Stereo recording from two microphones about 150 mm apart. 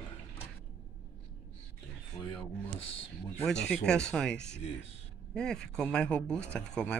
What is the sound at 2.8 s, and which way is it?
Speech, 40° left (ahead or behind).